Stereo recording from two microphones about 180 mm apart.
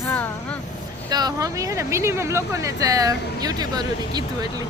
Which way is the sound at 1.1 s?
20° right (ahead or behind).